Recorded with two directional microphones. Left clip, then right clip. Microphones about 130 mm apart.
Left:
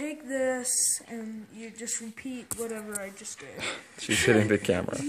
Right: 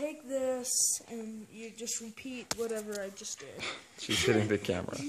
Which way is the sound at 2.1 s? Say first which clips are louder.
Even; 30° right (ahead or behind).